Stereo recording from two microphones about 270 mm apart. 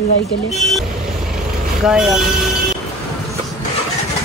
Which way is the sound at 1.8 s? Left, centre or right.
Centre.